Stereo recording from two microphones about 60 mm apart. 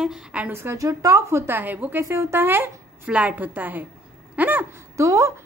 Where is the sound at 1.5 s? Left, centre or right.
Right.